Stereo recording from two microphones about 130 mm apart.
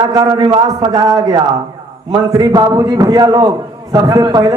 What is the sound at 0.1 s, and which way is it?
A woman's voice, 30° right (ahead or behind).